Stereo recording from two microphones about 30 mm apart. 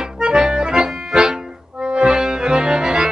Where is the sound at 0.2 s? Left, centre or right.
Right.